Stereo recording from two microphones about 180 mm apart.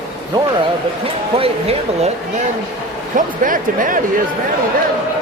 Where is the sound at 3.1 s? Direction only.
50° right (ahead or behind).